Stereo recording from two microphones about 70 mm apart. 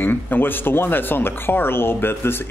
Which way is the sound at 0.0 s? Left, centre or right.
Left.